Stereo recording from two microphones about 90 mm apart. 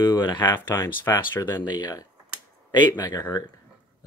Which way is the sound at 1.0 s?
25° left (ahead or behind).